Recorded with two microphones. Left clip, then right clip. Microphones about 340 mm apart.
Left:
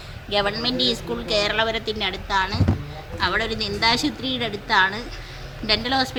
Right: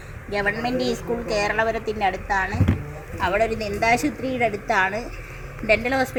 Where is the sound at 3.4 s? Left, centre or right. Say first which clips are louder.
Even; centre.